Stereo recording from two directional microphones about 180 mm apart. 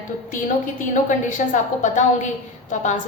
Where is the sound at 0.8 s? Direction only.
45° left (ahead or behind).